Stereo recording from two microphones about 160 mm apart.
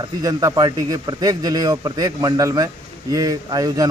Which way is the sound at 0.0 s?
20° right (ahead or behind).